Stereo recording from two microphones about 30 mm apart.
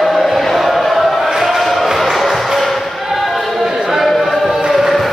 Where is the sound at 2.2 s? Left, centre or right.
Centre.